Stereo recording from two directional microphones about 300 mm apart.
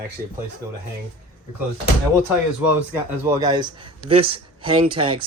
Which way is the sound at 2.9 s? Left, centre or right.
Centre.